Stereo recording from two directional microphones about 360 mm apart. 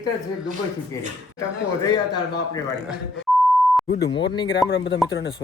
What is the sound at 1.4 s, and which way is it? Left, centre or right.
Speech, centre.